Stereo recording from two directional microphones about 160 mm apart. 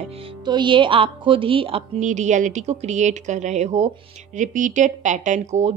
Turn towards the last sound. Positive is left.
turn(degrees=-45)  # may be behind; listen again after turning